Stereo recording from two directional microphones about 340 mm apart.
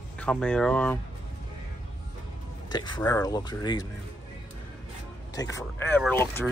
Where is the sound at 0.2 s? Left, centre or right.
Centre.